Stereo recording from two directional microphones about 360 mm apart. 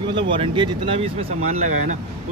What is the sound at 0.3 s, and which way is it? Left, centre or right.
Speech, centre.